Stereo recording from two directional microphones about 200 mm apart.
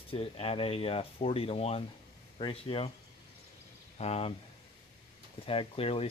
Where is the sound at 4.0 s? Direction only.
30° left (ahead or behind).